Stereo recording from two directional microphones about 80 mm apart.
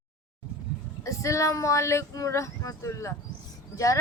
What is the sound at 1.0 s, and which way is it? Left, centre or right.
Speech, left.